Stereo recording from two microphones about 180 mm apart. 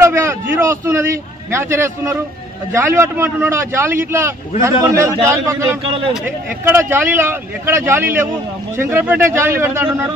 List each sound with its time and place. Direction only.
0.0 s a sound: 15° right (ahead or behind)
2.7 s a man's voice: 15° right (ahead or behind)
5.9 s a man's voice: 30° right (ahead or behind)
6.2 s a man's voice: 15° right (ahead or behind)